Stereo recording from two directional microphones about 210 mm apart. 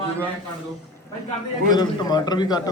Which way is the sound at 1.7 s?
20° left (ahead or behind).